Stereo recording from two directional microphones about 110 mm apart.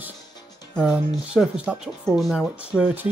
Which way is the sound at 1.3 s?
10° right (ahead or behind).